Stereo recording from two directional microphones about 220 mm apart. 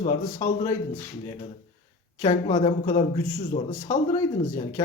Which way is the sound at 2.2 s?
20° left (ahead or behind).